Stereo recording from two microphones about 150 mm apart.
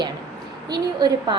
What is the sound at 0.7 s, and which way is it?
Speech, 25° right (ahead or behind).